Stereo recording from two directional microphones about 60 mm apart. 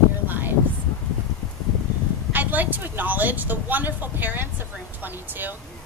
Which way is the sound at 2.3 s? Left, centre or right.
Right.